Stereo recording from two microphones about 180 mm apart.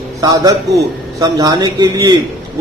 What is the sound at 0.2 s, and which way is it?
A man's voice, 20° right (ahead or behind).